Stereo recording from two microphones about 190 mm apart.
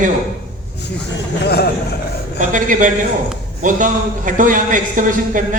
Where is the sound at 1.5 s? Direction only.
60° left (ahead or behind).